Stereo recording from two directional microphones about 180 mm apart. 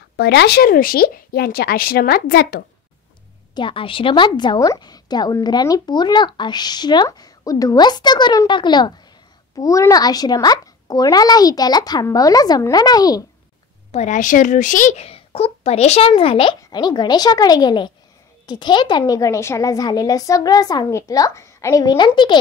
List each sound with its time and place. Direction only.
0.2 s speech: 65° left (ahead or behind)
3.5 s a woman's voice: 30° left (ahead or behind)
13.9 s a woman's voice: 45° left (ahead or behind); by 22.4 s 25° left (ahead or behind)